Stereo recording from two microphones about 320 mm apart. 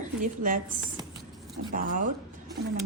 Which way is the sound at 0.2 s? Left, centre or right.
Right.